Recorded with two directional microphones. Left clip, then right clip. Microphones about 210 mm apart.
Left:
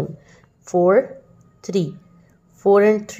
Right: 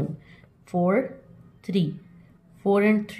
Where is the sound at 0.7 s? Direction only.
30° left (ahead or behind).